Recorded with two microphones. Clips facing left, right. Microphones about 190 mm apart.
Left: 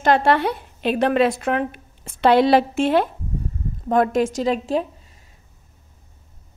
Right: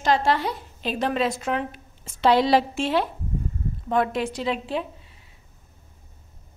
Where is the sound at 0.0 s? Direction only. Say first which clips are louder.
Left 5 dB; 60° left (ahead or behind); by 5.2 s 40° left (ahead or behind).